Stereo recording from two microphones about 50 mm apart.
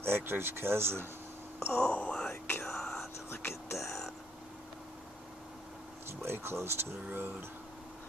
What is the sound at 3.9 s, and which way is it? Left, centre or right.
Whispering, centre.